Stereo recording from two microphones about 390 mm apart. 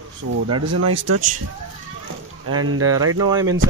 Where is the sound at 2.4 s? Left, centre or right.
Right.